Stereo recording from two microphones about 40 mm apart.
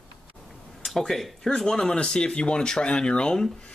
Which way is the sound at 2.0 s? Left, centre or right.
Left.